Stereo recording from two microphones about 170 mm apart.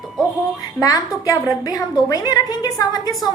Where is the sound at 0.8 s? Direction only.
20° left (ahead or behind).